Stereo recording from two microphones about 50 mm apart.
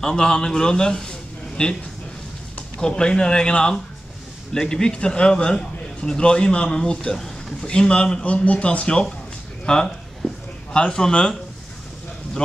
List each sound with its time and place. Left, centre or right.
0.0 s a man's voice: centre
2.8 s a man's voice: centre
9.7 s a sound: centre
12.4 s speech: left